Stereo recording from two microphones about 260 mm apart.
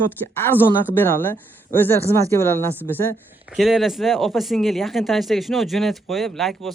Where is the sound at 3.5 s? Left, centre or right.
Centre.